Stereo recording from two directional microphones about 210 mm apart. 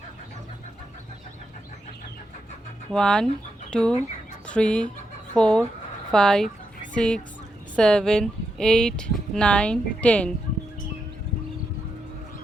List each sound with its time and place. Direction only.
2.9 s speech: 5° left (ahead or behind)